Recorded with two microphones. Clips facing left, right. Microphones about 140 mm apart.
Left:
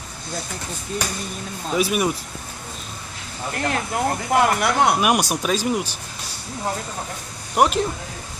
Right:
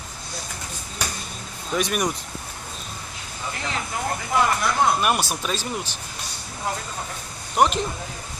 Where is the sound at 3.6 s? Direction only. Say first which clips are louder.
Left 6 dB; 60° left (ahead or behind).